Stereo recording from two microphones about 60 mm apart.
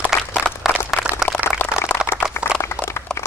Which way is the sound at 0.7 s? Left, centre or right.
Centre.